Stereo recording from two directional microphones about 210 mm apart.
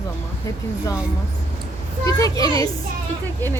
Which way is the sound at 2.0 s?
15° left (ahead or behind).